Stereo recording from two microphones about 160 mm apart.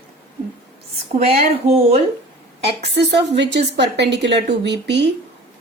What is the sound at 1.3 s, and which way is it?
Speech, 40° right (ahead or behind).